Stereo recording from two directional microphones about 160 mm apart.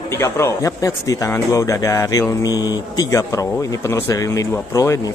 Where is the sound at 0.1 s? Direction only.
15° left (ahead or behind).